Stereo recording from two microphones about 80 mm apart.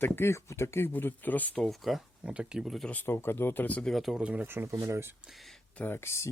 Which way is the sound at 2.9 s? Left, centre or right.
Left.